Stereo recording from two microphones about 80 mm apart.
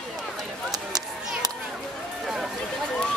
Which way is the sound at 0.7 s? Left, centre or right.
Right.